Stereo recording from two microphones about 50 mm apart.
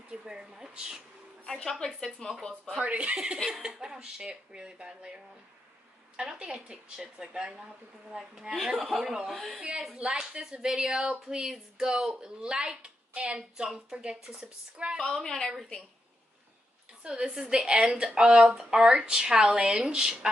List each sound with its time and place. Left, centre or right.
0.1 s speech: centre
1.4 s a woman's voice: centre
2.8 s a woman's voice: right; by 9.6 s centre
9.9 s a woman's voice: centre
13.6 s a woman's voice: centre
15.0 s a woman's voice: centre
17.0 s a woman's voice: centre